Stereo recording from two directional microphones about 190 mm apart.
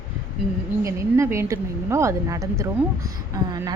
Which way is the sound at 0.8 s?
15° right (ahead or behind).